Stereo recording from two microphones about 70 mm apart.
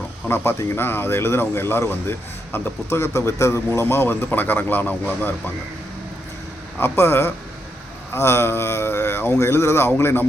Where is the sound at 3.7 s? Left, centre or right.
Left.